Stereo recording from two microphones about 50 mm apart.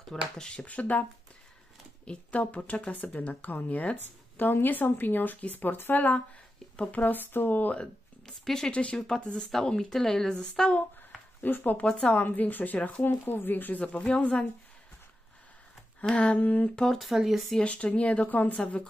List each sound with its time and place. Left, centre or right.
0.1 s speech: centre
2.0 s speech: left
7.7 s speech: centre
10.7 s speech: left
11.8 s speech: left
12.3 s speech: left
13.0 s speech: left
16.2 s speech: left
17.0 s speech: centre
17.6 s speech: left
18.6 s speech: left